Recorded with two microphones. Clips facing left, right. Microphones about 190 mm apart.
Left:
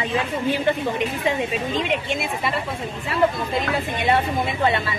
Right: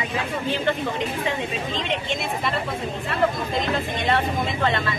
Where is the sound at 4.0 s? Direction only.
10° left (ahead or behind).